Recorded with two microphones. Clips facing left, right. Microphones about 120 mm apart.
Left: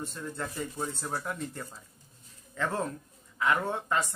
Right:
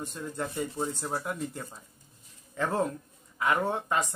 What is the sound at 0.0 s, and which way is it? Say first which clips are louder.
Speech: right 2 dB; 15° right (ahead or behind).